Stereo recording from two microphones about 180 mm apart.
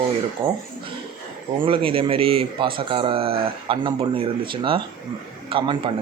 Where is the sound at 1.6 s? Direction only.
30° right (ahead or behind).